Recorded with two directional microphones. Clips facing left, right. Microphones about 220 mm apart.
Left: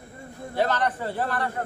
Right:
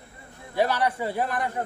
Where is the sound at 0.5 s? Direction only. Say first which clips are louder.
Right 1 dB; 10° right (ahead or behind).